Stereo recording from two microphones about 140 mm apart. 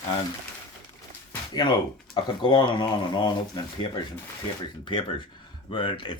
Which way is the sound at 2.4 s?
35° left (ahead or behind).